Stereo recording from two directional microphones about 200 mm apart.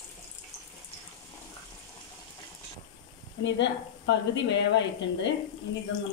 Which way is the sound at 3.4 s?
65° left (ahead or behind).